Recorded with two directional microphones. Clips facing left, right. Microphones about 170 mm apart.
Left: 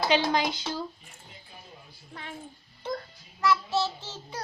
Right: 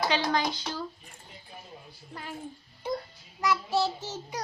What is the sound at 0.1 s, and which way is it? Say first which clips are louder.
Speech: left 3 dB; 20° left (ahead or behind).